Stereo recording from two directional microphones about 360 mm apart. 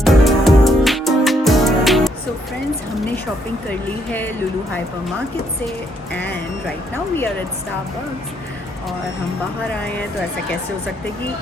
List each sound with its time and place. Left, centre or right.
0.0 s music: centre
3.7 s speech: centre
6.1 s speech: centre